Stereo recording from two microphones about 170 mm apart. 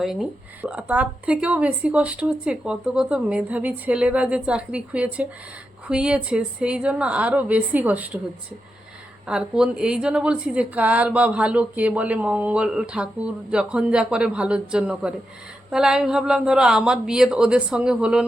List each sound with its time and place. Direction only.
0.0 s speech: centre (ahead or behind)
9.2 s speech: 5° right (ahead or behind)